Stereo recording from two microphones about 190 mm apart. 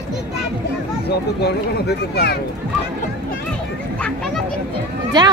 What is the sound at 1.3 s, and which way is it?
Speech, 60° left (ahead or behind).